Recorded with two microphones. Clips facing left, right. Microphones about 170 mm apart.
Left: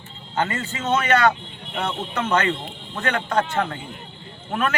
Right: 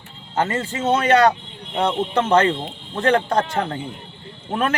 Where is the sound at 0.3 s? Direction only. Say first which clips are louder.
Right 3 dB; 30° right (ahead or behind).